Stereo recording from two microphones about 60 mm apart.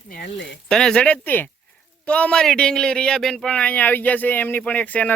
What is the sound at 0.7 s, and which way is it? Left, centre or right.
Speech, centre.